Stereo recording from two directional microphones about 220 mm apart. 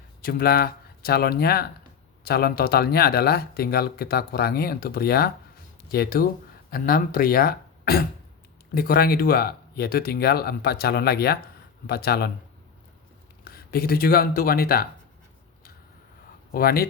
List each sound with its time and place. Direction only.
0.2 s speech: 40° left (ahead or behind)
13.4 s speech: 45° left (ahead or behind)
16.5 s speech: 45° left (ahead or behind)